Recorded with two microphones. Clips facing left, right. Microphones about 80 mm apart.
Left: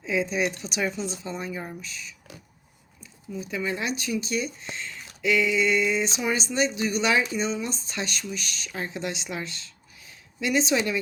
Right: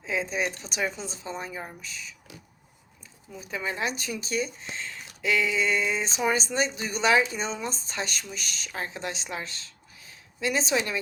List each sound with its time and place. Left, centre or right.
0.0 s speech: right
0.9 s speech: left
1.2 s speech: right
3.5 s speech: right
6.1 s speech: right